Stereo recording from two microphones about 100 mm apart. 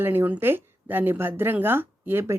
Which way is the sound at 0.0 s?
20° right (ahead or behind).